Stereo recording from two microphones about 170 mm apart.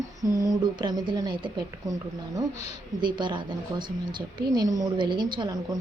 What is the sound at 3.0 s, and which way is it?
A woman's voice, 25° right (ahead or behind).